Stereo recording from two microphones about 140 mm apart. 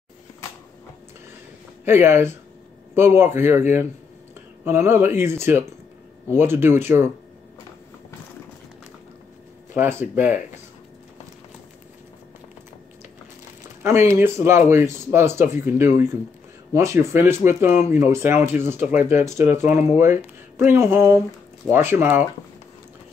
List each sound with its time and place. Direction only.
1.9 s speech: 15° right (ahead or behind)
9.8 s speech: 15° right (ahead or behind)
13.8 s speech: 20° right (ahead or behind)